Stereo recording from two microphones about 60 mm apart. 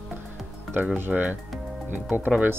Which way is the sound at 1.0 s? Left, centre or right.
Right.